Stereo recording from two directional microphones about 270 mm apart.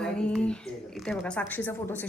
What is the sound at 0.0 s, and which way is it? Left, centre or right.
Speech, centre.